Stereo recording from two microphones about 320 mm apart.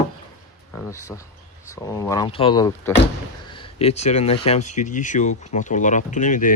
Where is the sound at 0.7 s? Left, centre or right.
Centre; by 6.5 s left.